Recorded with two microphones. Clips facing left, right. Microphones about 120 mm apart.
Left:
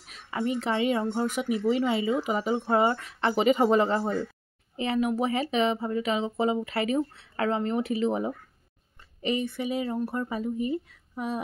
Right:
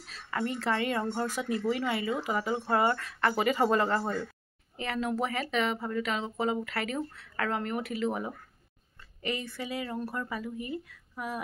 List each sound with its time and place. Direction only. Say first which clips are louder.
0.0 s speech: left 3 dB; 15° left (ahead or behind)